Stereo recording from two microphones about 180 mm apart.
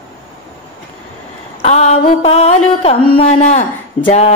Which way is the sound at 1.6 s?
40° left (ahead or behind).